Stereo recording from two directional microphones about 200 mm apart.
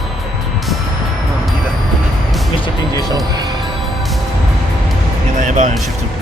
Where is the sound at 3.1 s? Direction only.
20° right (ahead or behind).